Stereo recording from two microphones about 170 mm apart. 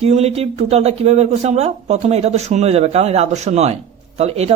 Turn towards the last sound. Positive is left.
turn(degrees=-40)  # may be behind; listen again after turning